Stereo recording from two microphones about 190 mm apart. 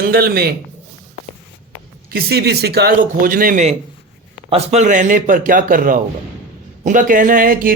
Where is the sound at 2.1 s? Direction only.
60° right (ahead or behind).